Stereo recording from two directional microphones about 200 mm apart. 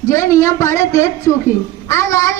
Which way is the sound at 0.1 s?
15° left (ahead or behind).